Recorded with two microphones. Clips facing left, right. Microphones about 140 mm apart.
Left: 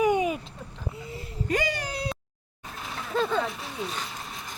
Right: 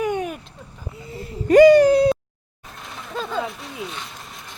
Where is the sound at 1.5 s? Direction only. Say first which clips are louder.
Right 19 dB; 70° right (ahead or behind).